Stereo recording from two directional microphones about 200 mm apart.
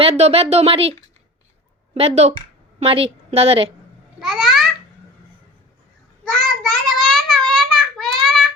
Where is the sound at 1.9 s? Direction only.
30° right (ahead or behind).